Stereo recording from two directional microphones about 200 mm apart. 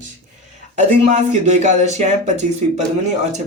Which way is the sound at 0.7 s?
35° right (ahead or behind).